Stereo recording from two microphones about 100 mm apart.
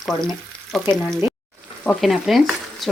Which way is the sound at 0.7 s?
Centre (ahead or behind).